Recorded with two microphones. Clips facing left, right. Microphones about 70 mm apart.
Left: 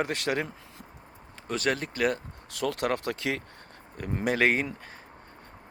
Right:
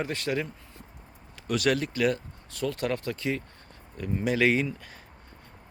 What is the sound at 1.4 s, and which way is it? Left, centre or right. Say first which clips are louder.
Speech: right 3 dB; left.